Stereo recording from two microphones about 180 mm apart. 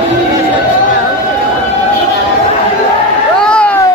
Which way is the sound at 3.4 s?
5° left (ahead or behind).